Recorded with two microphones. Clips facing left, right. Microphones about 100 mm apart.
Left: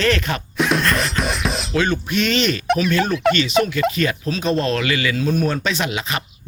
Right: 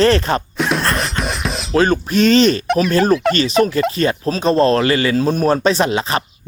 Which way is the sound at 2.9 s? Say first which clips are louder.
Right 4 dB; 35° right (ahead or behind).